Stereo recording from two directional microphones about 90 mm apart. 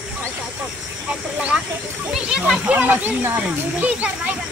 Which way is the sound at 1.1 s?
15° right (ahead or behind).